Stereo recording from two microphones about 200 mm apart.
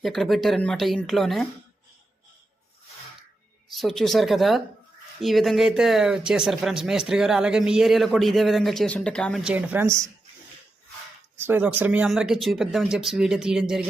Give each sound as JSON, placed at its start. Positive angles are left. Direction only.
{"t": 0.0, "sound": "a man's voice", "side_deg": 0}
{"t": 3.7, "sound": "a man's voice", "side_deg": 0}
{"t": 11.3, "sound": "a man's voice", "side_deg": -10}